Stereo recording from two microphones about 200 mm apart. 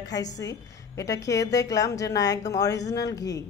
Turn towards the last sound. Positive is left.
turn(degrees=15)  # may be behind; listen again after turning